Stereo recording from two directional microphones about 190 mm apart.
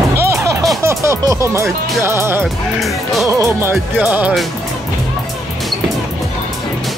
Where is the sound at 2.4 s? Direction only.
Centre (ahead or behind).